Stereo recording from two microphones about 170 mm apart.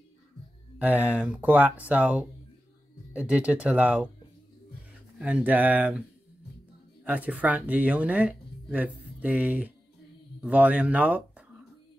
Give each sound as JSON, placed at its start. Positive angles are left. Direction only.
{"t": 0.7, "sound": "speech", "side_deg": -10}
{"t": 3.3, "sound": "speech", "side_deg": -10}
{"t": 5.2, "sound": "speech", "side_deg": -10}
{"t": 7.1, "sound": "speech", "side_deg": -10}